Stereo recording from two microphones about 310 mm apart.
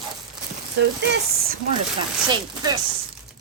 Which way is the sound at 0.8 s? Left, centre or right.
Right.